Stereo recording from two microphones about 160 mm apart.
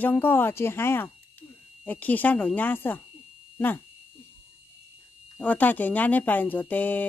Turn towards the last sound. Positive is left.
turn(degrees=10)  # may be behind; listen again after turning